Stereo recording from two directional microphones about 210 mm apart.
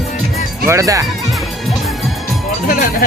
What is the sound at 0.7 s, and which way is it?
Speech, 15° right (ahead or behind).